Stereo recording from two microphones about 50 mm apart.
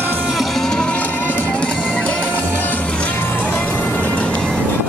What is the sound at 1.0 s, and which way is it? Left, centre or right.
Music, left.